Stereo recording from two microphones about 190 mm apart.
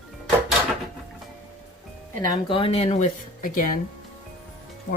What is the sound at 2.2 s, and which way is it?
Speech, 25° left (ahead or behind).